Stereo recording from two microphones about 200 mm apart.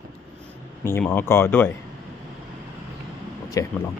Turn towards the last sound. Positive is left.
turn(degrees=15)  # may be behind; listen again after turning